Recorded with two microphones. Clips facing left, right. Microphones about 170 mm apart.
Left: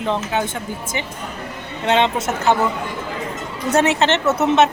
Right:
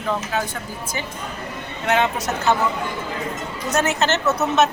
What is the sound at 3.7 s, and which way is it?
Speech, 30° left (ahead or behind).